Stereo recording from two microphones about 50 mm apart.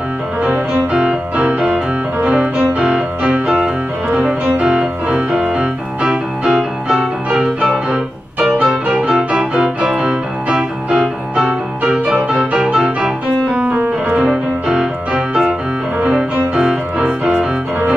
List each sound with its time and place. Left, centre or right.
0.4 s music: right